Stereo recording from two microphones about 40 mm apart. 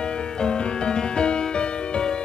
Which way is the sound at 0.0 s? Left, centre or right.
Left.